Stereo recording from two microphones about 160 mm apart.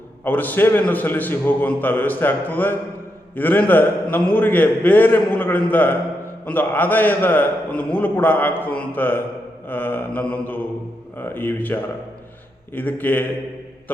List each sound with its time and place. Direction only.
0.3 s a man's voice: 10° left (ahead or behind)